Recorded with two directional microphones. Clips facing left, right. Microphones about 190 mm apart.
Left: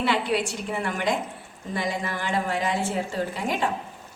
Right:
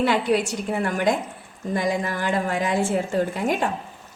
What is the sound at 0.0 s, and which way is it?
A woman's voice, 45° right (ahead or behind).